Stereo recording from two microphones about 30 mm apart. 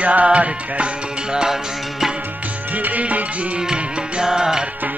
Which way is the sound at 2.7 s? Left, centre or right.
Right.